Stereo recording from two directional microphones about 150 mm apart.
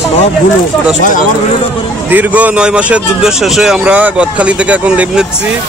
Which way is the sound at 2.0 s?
10° right (ahead or behind).